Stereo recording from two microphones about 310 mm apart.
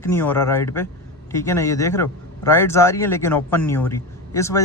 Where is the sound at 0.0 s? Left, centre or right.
Centre.